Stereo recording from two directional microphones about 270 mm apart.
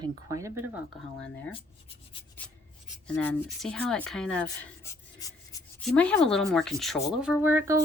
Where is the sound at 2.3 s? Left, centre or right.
Centre.